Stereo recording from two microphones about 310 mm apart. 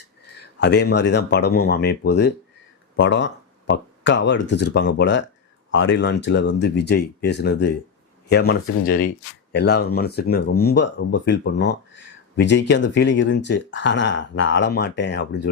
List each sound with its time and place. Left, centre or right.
0.6 s speech: left